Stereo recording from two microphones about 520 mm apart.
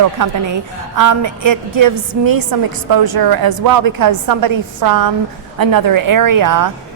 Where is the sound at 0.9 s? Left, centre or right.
Right.